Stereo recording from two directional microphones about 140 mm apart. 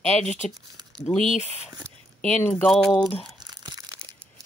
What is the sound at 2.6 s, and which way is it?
Speech, 5° left (ahead or behind).